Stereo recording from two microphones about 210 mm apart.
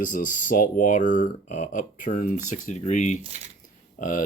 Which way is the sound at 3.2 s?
30° right (ahead or behind).